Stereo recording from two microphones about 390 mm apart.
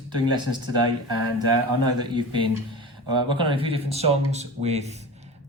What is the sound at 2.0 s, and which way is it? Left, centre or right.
Speech, centre.